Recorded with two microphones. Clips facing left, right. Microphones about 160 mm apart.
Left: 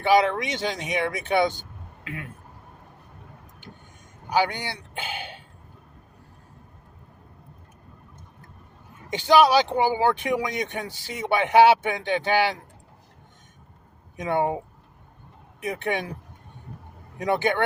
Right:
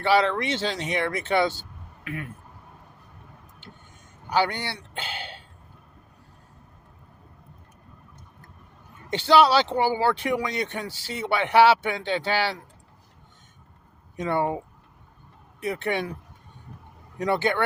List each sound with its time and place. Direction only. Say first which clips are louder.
0.0 s speech: left 1 dB; 15° left (ahead or behind)
4.3 s speech: even; 10° left (ahead or behind)
9.0 s speech: left 1 dB; 15° left (ahead or behind)
14.2 s speech: left 1 dB; 15° left (ahead or behind)
15.6 s speech: right 1 dB; 15° left (ahead or behind)
17.2 s speech: left 1 dB; 15° left (ahead or behind)